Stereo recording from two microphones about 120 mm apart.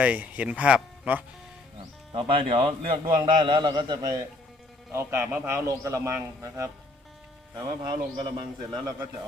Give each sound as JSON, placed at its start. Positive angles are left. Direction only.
{"t": 0.0, "sound": "speech", "side_deg": -10}
{"t": 2.1, "sound": "a man's voice", "side_deg": -45}
{"t": 4.9, "sound": "a man's voice", "side_deg": -20}
{"t": 7.9, "sound": "a man's voice", "side_deg": -40}